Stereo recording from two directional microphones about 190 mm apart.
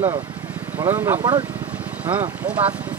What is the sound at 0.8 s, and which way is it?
Speech, 15° right (ahead or behind).